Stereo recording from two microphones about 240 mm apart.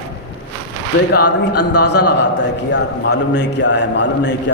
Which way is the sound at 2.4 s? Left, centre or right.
Left.